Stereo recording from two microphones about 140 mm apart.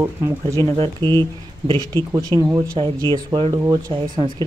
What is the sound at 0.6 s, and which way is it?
Speech, 40° right (ahead or behind).